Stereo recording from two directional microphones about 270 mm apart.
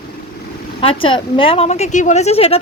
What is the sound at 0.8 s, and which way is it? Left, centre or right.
A woman's voice, centre.